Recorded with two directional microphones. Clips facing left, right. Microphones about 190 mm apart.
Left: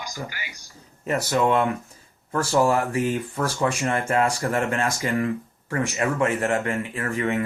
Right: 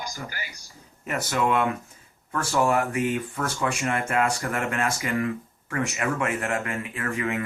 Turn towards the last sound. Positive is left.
turn(degrees=30)  # may be behind; listen again after turning